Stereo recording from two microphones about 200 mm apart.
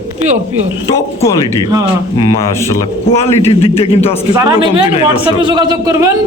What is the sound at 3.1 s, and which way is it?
A man's voice, 30° left (ahead or behind).